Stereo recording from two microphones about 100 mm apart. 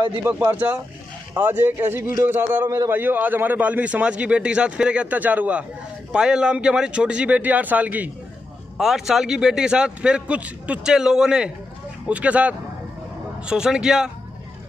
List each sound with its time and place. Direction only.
0.2 s a man's voice: 20° right (ahead or behind)
8.7 s a man's voice: 5° right (ahead or behind)